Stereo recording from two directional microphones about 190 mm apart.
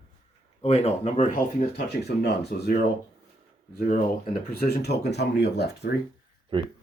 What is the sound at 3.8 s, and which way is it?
Speech, 45° left (ahead or behind).